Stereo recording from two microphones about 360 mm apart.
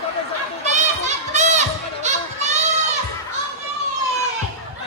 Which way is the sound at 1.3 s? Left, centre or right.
Centre.